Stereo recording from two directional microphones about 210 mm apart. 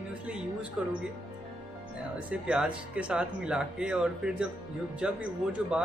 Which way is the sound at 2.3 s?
5° right (ahead or behind).